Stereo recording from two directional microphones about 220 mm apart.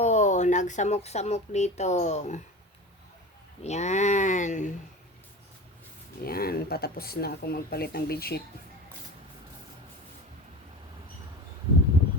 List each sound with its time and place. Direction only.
0.0 s speech: 30° left (ahead or behind)
3.6 s speech: 30° left (ahead or behind)
6.2 s speech: 45° left (ahead or behind)